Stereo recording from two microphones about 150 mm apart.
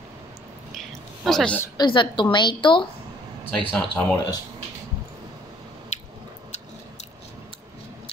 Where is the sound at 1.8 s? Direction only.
30° left (ahead or behind).